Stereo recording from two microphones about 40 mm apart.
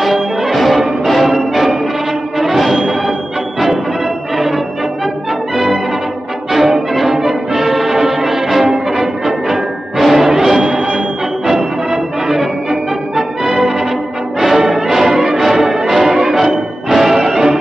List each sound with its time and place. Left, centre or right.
0.0 s music: centre
6.9 s music: centre
11.9 s music: centre